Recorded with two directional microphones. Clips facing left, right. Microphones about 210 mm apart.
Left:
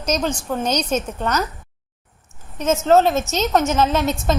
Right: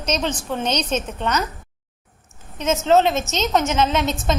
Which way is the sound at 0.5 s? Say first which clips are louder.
Left 2 dB; 5° left (ahead or behind).